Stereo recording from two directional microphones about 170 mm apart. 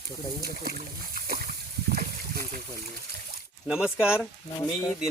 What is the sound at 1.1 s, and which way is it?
Splash, 60° right (ahead or behind).